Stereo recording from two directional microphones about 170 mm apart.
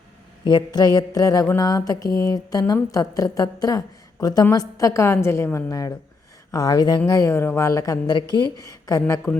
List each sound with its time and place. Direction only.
0.4 s mantra: 25° left (ahead or behind)